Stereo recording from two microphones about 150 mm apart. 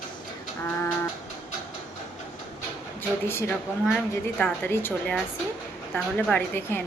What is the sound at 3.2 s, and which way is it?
A woman's voice, 15° left (ahead or behind).